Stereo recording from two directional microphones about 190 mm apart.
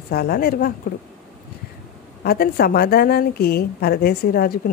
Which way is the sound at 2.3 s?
55° left (ahead or behind).